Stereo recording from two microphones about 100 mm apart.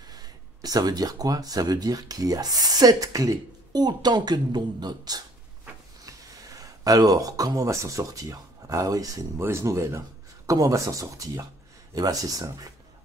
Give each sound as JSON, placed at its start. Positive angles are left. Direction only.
{"t": 0.1, "sound": "speech", "side_deg": -40}